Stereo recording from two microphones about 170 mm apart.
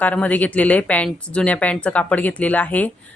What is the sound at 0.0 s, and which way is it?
Speech, 10° left (ahead or behind).